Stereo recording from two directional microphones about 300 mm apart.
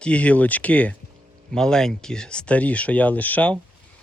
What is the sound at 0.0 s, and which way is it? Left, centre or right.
Speech, centre.